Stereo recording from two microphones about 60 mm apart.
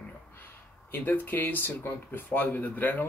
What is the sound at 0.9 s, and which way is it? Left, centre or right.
Speech, left.